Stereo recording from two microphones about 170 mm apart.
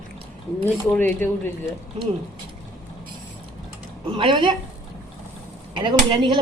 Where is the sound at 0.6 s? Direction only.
10° left (ahead or behind).